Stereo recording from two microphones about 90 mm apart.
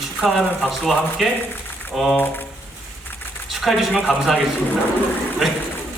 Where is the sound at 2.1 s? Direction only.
20° left (ahead or behind).